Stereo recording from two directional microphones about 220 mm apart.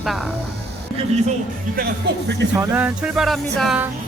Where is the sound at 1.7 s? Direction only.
45° right (ahead or behind).